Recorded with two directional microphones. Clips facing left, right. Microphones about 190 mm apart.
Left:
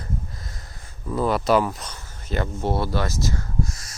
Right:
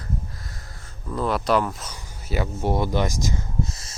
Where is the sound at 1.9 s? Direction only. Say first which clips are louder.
Even; 10° right (ahead or behind).